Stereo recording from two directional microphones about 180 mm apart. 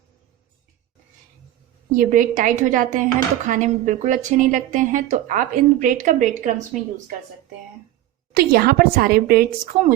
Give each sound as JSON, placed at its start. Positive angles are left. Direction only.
{"t": 2.0, "sound": "speech", "side_deg": -50}
{"t": 8.3, "sound": "a woman's voice", "side_deg": -55}